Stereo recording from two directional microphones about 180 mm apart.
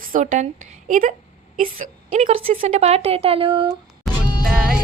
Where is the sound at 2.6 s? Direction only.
35° right (ahead or behind).